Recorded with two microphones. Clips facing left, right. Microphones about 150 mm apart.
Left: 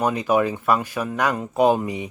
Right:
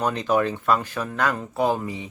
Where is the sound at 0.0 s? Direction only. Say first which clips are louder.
Left 2 dB; 10° left (ahead or behind).